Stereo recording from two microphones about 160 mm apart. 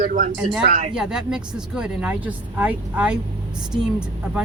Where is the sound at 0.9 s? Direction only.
5° right (ahead or behind).